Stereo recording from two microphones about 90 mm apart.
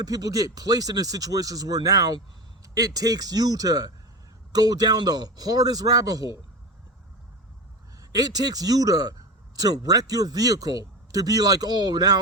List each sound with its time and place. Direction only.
0.0 s a man's voice: 45° right (ahead or behind)
7.9 s a man's voice: 45° right (ahead or behind)